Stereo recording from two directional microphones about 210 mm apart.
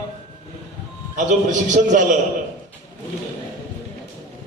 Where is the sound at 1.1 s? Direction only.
35° right (ahead or behind).